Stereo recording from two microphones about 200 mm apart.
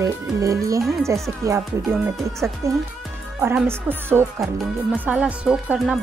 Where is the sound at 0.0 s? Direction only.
15° right (ahead or behind).